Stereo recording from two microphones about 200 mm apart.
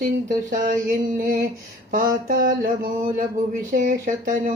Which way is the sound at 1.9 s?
45° right (ahead or behind).